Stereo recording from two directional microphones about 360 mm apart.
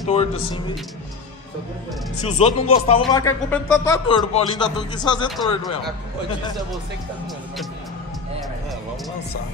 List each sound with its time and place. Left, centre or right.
0.0 s speech: centre
2.2 s speech: centre